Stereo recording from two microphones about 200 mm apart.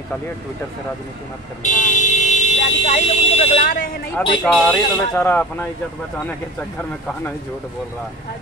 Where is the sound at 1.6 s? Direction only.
40° left (ahead or behind).